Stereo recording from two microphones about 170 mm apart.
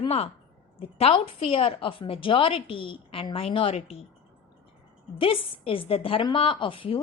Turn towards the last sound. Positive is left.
turn(degrees=30)  # may be behind; listen again after turning